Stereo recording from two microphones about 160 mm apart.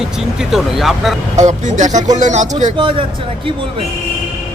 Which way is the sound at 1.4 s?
50° right (ahead or behind).